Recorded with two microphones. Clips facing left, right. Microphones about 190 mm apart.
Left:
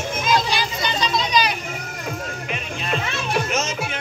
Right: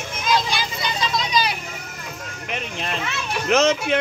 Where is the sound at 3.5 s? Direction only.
65° right (ahead or behind).